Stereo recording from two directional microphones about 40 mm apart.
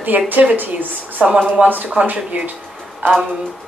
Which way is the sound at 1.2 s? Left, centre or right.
Right.